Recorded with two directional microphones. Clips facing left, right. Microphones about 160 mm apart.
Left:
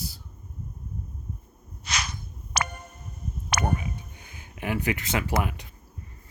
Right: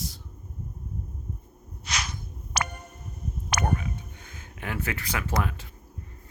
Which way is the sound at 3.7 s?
15° left (ahead or behind).